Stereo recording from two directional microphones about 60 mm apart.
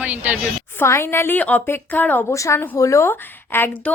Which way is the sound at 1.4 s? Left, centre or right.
Left.